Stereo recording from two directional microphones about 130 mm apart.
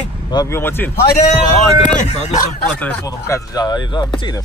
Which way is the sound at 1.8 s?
70° left (ahead or behind).